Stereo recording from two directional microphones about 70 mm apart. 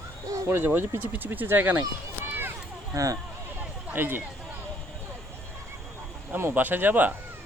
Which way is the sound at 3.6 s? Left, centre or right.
Right.